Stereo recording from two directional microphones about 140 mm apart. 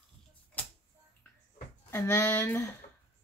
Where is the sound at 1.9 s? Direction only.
20° left (ahead or behind).